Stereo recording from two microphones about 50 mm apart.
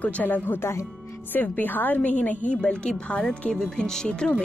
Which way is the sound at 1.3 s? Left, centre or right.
Left.